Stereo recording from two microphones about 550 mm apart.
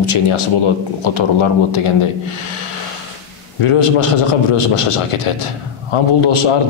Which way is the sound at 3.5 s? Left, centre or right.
Left.